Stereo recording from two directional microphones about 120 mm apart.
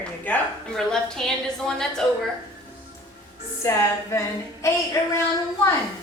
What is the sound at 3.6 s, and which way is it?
A woman's voice, 20° left (ahead or behind).